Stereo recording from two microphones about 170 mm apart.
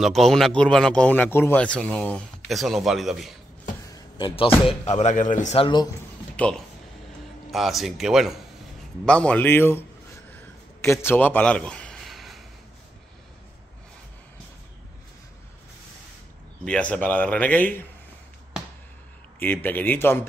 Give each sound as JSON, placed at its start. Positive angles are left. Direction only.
{"t": 0.0, "sound": "a man's voice", "side_deg": 0}
{"t": 3.9, "sound": "a sound", "side_deg": 25}
{"t": 4.6, "sound": "speech", "side_deg": 40}
{"t": 6.3, "sound": "a man's voice", "side_deg": 10}
{"t": 10.8, "sound": "a sound", "side_deg": 15}
{"t": 16.6, "sound": "speech", "side_deg": 5}
{"t": 19.4, "sound": "speech", "side_deg": 10}